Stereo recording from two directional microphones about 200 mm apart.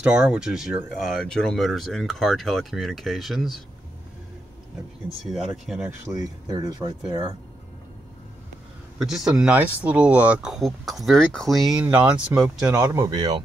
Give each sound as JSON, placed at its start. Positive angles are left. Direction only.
{"t": 0.0, "sound": "speech", "side_deg": -5}
{"t": 5.2, "sound": "speech", "side_deg": 0}
{"t": 6.1, "sound": "speech", "side_deg": -20}
{"t": 9.0, "sound": "speech", "side_deg": 0}
{"t": 11.9, "sound": "speech", "side_deg": -10}